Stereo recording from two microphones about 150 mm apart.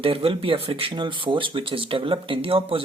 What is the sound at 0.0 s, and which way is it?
Speech, 35° right (ahead or behind).